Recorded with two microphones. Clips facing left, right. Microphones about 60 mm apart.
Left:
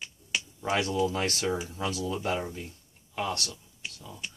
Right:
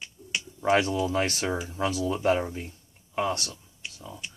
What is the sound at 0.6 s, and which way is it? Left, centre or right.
Speech, right.